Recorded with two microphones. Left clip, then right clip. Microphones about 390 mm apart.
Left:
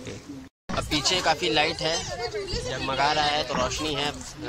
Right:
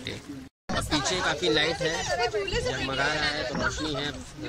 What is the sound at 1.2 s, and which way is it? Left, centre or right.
Speech, centre.